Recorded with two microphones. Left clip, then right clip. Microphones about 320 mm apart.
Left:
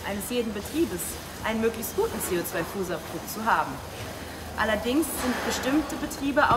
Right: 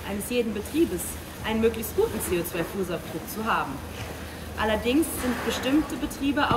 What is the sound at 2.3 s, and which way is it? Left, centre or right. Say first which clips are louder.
Speech: right 1 dB; left.